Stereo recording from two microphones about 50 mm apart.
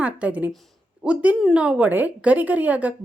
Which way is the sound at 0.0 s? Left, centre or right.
Right.